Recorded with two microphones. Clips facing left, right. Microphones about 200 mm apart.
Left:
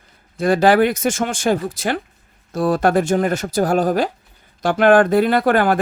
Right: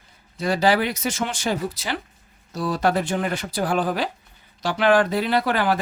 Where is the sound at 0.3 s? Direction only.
50° left (ahead or behind).